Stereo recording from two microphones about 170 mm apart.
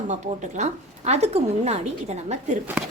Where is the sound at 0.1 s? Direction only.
45° right (ahead or behind).